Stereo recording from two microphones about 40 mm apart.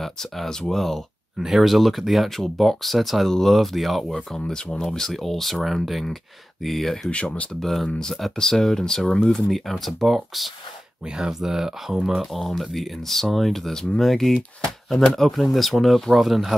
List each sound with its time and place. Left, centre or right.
0.0 s speech: centre
1.4 s speech: centre
3.3 s speech: centre
3.5 s speech: centre
4.4 s speech: centre
7.1 s speech: left
7.6 s speech: centre
9.3 s speech: centre
11.1 s speech: centre